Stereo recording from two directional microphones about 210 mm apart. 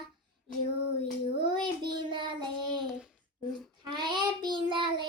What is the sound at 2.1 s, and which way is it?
Child singing, 25° right (ahead or behind).